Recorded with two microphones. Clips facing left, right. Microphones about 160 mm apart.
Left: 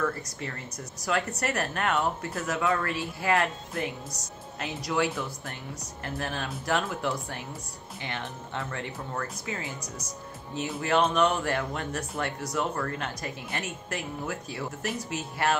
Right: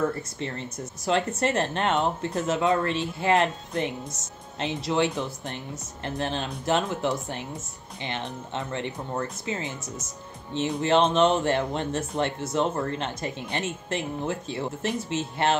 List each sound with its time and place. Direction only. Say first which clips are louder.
0.0 s speech: right 3 dB; 25° right (ahead or behind)